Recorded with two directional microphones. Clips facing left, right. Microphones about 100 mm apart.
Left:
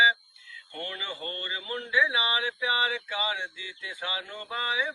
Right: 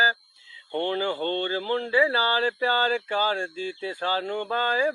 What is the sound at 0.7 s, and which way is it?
Speech, 45° right (ahead or behind).